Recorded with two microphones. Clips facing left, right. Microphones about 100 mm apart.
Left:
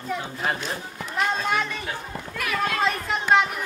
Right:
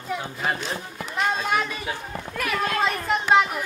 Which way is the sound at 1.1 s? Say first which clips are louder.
Even; 5° right (ahead or behind).